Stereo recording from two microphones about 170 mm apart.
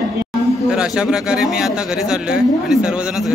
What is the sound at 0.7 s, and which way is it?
Speech, 5° right (ahead or behind).